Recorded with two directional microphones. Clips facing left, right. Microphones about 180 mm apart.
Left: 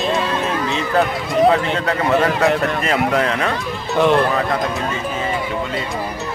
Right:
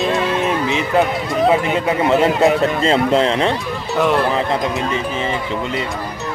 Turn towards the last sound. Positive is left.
turn(degrees=-25)  # may be behind; listen again after turning